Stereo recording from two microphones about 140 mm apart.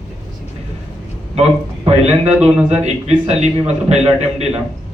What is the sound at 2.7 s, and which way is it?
A man's voice, 50° right (ahead or behind).